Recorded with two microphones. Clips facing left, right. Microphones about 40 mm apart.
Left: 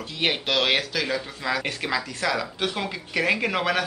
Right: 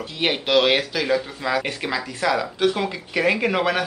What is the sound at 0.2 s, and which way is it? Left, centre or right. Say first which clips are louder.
Speech: right 5 dB; centre.